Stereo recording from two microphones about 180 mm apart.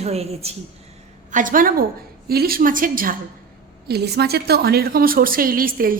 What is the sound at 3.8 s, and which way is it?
A woman's voice, 65° right (ahead or behind).